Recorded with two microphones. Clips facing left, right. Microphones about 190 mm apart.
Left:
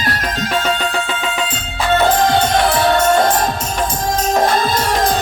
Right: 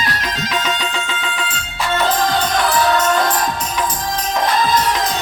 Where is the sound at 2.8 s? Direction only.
50° left (ahead or behind).